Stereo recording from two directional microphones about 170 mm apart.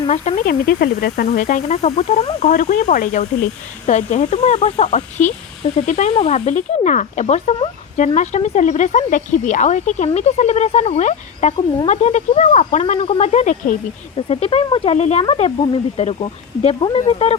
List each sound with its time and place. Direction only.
0.1 s speech: 40° left (ahead or behind)
0.4 s speech: 65° left (ahead or behind); by 13.7 s 45° left (ahead or behind)
14.2 s speech: 35° left (ahead or behind)